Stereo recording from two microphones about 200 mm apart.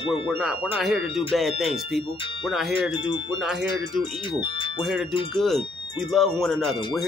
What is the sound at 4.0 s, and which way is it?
Speech, 25° left (ahead or behind).